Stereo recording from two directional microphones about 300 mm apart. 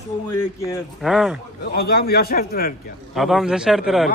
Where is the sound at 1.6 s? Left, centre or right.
Left.